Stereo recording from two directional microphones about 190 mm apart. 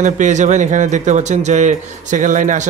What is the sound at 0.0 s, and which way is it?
A man's voice, 40° right (ahead or behind).